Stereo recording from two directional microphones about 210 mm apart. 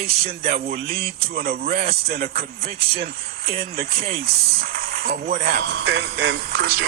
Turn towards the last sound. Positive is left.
turn(degrees=-55)  # may be behind; listen again after turning